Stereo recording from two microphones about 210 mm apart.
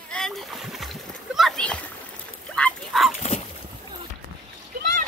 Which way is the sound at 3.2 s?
30° left (ahead or behind).